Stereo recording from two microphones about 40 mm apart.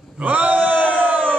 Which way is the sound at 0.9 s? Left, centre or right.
Right.